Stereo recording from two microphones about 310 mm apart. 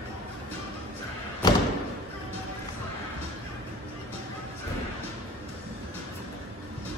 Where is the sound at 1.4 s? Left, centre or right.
Centre.